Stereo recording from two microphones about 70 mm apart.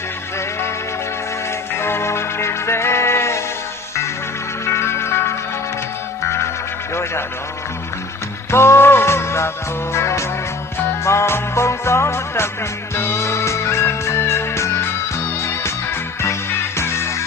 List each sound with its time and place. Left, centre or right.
1.8 s music: left
4.6 s music: left
8.4 s music: left
16.2 s music: left